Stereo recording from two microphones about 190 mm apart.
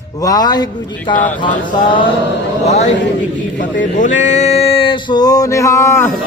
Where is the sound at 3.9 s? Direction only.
40° left (ahead or behind); by 6.1 s 15° left (ahead or behind).